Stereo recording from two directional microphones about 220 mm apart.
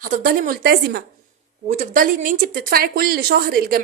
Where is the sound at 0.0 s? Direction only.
40° right (ahead or behind).